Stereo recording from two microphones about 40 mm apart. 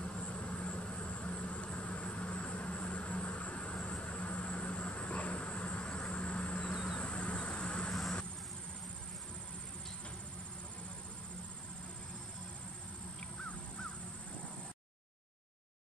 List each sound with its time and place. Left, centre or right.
0.0 s vehicle: left